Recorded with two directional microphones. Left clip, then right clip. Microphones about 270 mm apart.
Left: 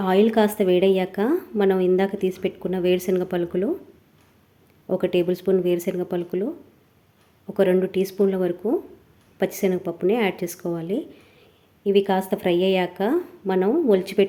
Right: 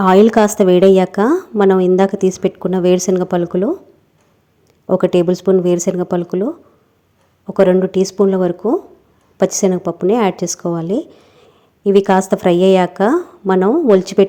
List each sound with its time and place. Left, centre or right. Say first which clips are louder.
0.0 s a woman's voice: right 9 dB; right
4.9 s a woman's voice: right 8 dB; right
7.4 s a woman's voice: right 8 dB; centre